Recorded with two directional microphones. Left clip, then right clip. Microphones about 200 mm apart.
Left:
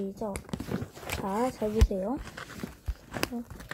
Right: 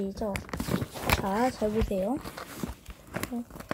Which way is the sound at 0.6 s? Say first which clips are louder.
Right 4 dB; 45° right (ahead or behind).